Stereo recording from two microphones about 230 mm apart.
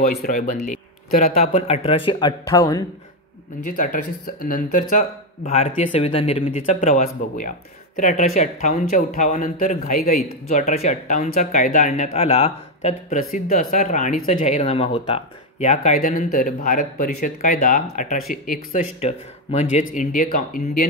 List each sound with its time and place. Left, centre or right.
0.2 s speech: left; by 2.8 s centre
3.6 s speech: left